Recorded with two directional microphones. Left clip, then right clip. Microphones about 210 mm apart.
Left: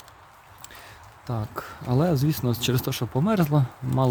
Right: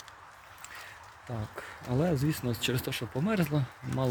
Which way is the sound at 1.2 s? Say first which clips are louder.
Left 8 dB; 25° left (ahead or behind).